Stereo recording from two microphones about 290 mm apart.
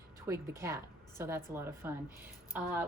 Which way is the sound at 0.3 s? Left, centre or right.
Centre.